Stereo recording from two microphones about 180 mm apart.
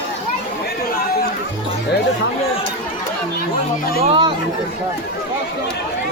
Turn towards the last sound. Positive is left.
turn(degrees=-30)  # may be behind; listen again after turning